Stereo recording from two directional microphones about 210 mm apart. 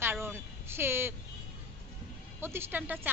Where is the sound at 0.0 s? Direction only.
10° right (ahead or behind).